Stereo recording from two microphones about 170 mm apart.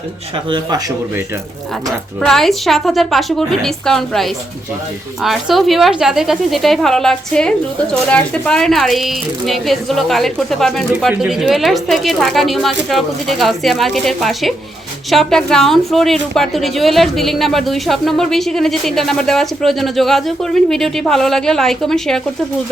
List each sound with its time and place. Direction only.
0.5 s speech: 20° right (ahead or behind)
2.2 s a woman's voice: centre (ahead or behind)